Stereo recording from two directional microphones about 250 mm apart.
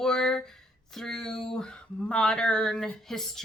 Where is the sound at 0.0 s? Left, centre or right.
Centre.